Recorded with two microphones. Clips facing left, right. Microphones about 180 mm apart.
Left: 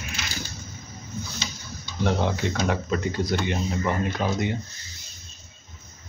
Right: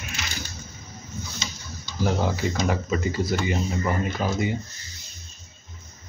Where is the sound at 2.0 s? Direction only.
5° right (ahead or behind).